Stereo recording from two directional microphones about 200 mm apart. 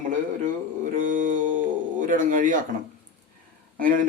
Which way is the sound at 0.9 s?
40° right (ahead or behind).